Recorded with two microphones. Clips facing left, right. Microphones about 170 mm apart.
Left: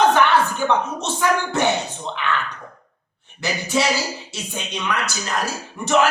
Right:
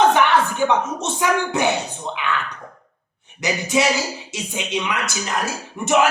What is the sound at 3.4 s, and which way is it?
Speech, 20° right (ahead or behind).